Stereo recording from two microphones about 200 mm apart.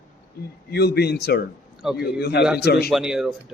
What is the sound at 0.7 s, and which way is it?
Speech, 55° left (ahead or behind).